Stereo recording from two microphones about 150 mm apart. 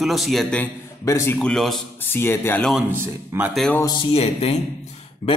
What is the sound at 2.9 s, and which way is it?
Speech, 15° right (ahead or behind).